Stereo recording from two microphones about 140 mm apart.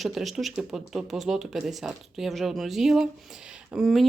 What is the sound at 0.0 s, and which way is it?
Speech, centre (ahead or behind).